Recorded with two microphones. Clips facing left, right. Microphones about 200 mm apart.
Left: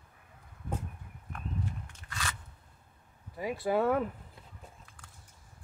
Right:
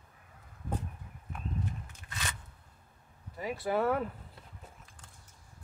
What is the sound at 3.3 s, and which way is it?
Speech, 20° left (ahead or behind).